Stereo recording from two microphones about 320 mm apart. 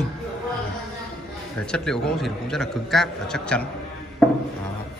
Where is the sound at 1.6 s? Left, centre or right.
Centre.